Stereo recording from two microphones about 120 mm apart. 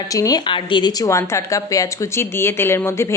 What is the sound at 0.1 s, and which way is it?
Speech, 30° left (ahead or behind).